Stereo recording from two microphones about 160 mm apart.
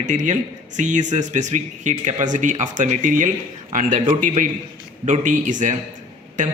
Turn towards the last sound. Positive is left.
turn(degrees=-50)  # may be behind; listen again after turning